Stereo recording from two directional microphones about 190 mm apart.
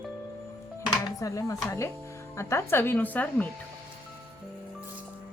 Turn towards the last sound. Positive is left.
turn(degrees=10)  # may be behind; listen again after turning